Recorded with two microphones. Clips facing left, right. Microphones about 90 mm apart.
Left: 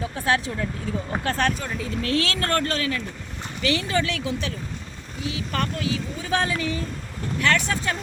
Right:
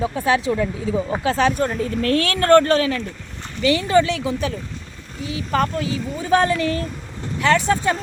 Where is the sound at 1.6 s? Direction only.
45° right (ahead or behind).